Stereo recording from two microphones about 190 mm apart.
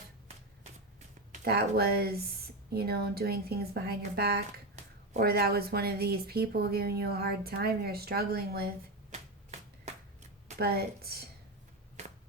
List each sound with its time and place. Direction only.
1.5 s a woman's voice: 55° right (ahead or behind)
9.0 s a sound: 35° right (ahead or behind)
10.6 s a woman's voice: 55° right (ahead or behind)